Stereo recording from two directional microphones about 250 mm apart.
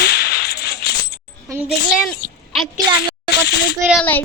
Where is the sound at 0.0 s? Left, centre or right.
Left.